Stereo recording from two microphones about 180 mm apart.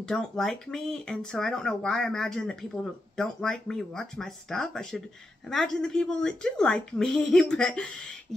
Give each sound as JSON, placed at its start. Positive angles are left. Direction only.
{"t": 0.1, "sound": "speech", "side_deg": 5}